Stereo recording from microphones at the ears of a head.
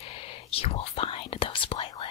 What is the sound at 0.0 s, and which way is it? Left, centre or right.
Whispering, left.